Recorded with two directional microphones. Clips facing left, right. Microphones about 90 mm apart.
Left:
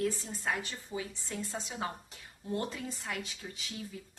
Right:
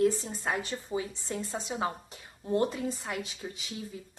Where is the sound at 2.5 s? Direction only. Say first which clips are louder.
Right 8 dB; 20° right (ahead or behind).